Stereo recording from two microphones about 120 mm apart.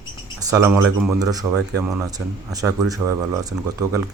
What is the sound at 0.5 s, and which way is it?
Speech, 20° right (ahead or behind).